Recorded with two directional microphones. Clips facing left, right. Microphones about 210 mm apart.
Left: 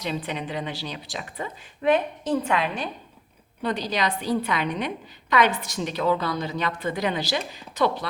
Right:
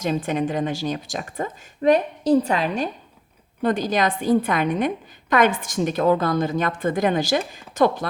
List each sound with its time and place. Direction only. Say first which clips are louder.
0.0 s speech: right 7 dB; 45° right (ahead or behind)